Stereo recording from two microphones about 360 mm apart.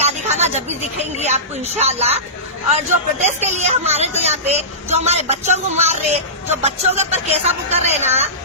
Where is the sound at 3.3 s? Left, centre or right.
Centre.